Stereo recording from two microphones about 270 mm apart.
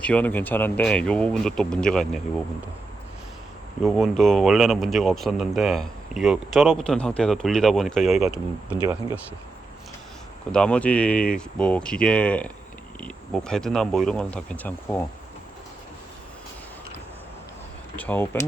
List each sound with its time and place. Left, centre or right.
0.0 s speech: centre
3.8 s speech: centre
10.5 s speech: centre
17.9 s speech: centre